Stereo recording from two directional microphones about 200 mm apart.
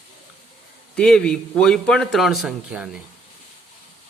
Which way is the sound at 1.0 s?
5° left (ahead or behind).